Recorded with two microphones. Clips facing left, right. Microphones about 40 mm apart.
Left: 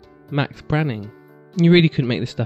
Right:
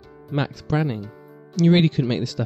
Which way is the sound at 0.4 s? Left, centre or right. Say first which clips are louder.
Left 2 dB; left.